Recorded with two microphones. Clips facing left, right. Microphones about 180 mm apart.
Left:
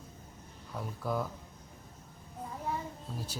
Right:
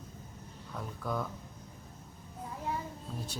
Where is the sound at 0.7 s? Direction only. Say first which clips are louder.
Left 2 dB; 5° left (ahead or behind).